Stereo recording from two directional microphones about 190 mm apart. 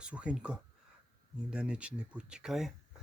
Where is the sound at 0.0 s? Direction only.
5° right (ahead or behind).